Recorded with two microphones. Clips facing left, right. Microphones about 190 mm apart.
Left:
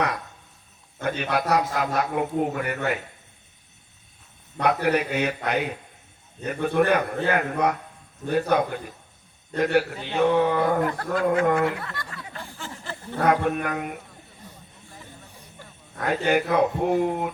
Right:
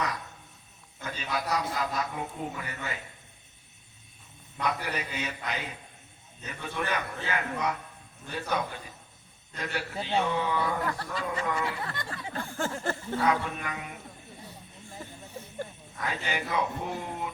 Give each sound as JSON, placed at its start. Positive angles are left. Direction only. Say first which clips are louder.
{"t": 1.0, "sound": "a man's voice", "louder": "left 8 dB", "side_deg": 65}
{"t": 4.6, "sound": "a man's voice", "louder": "left 10 dB", "side_deg": 65}
{"t": 11.9, "sound": "speech", "louder": "even", "side_deg": -25}
{"t": 12.4, "sound": "a sound", "louder": "right 9 dB", "side_deg": -50}
{"t": 13.1, "sound": "a man's voice", "louder": "left 8 dB", "side_deg": 55}
{"t": 16.0, "sound": "a man's voice", "louder": "left 11 dB", "side_deg": 55}